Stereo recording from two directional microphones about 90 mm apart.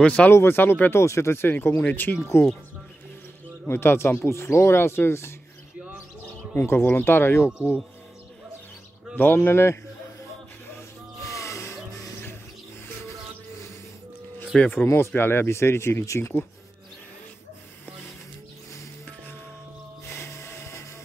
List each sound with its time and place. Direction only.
0.0 s speech: 15° left (ahead or behind)
0.3 s speech: 25° left (ahead or behind)
3.6 s speech: 25° left (ahead or behind)
6.5 s speech: 25° left (ahead or behind)
9.1 s speech: 20° left (ahead or behind)
11.2 s music: 35° left (ahead or behind)
14.4 s speech: 10° left (ahead or behind)
14.9 s speech: 30° left (ahead or behind)
20.1 s music: 30° left (ahead or behind)